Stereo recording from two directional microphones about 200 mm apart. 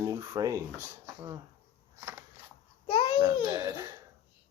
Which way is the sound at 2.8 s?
25° left (ahead or behind).